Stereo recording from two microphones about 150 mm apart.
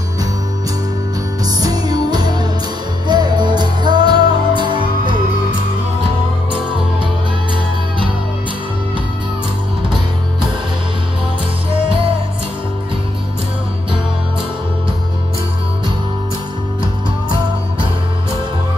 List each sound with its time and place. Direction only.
1.4 s music: 25° right (ahead or behind)